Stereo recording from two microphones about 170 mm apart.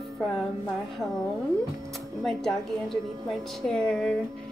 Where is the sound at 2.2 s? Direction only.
Centre (ahead or behind).